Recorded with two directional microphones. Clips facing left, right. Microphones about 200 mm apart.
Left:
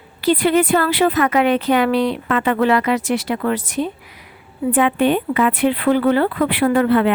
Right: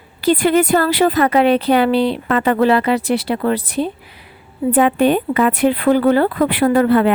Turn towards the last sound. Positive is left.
turn(degrees=-40)  # may be behind; listen again after turning